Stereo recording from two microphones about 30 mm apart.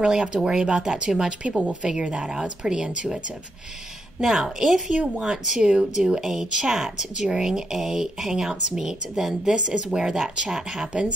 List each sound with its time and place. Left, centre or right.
0.0 s a woman's voice: right
4.2 s a woman's voice: centre
4.8 s a woman's voice: right
6.2 s speech: centre
6.5 s a woman's voice: right